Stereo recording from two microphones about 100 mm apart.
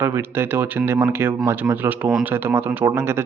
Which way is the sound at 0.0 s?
20° right (ahead or behind).